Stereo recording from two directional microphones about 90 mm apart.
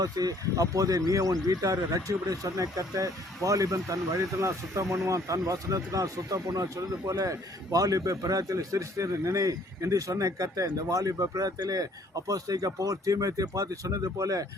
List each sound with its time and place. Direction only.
0.0 s speech: 45° right (ahead or behind)